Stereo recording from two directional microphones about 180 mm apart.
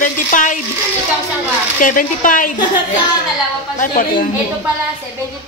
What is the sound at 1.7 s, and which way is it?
Speech, 45° left (ahead or behind).